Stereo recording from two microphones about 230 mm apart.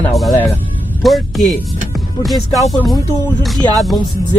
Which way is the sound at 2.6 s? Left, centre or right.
Centre.